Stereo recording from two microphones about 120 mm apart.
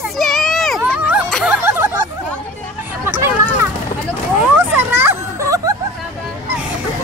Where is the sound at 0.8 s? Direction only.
10° right (ahead or behind).